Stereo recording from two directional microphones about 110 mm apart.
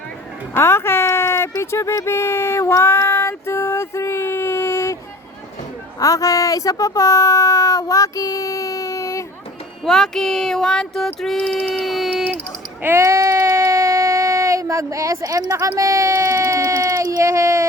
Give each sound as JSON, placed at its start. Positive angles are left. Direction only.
{"t": 0.5, "sound": "speech", "side_deg": 25}
{"t": 6.0, "sound": "speech", "side_deg": 30}
{"t": 9.8, "sound": "a sound", "side_deg": 5}
{"t": 12.8, "sound": "speech", "side_deg": -20}